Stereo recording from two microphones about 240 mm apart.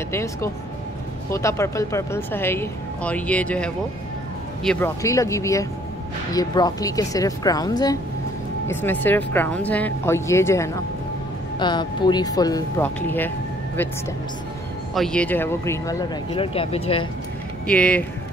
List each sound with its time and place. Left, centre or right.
0.1 s speech: centre
15.0 s speech: centre; by 17.1 s left
17.6 s speech: centre